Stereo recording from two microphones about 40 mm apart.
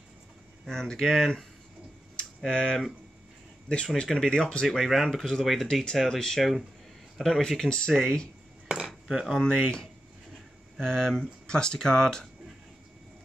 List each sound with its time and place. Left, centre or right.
0.7 s speech: centre
2.4 s speech: centre
4.6 s speech: centre
5.2 s speech: centre
7.4 s speech: centre
8.6 s dishes: centre
10.8 s speech: centre